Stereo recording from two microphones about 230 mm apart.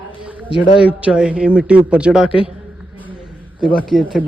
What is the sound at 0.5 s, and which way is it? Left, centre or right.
Speech, left.